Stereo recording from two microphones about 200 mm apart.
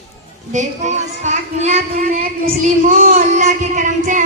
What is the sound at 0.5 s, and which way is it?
A child's voice, 35° right (ahead or behind).